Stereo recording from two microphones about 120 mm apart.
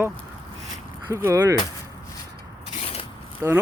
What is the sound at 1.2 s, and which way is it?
Speech, 25° right (ahead or behind).